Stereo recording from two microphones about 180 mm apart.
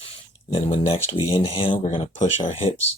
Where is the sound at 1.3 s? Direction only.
30° left (ahead or behind).